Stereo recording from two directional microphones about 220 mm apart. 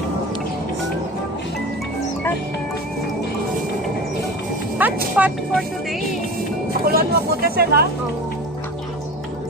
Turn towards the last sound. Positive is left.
turn(degrees=-45)  # may be behind; listen again after turning